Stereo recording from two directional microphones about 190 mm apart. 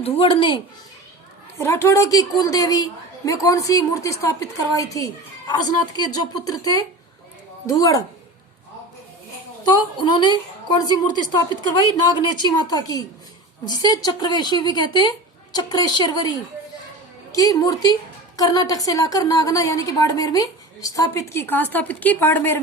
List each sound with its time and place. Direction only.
0.0 s speech: 30° left (ahead or behind)
1.5 s a woman's voice: 15° left (ahead or behind)
9.6 s speech: 25° left (ahead or behind)
17.3 s a woman's voice: 20° left (ahead or behind)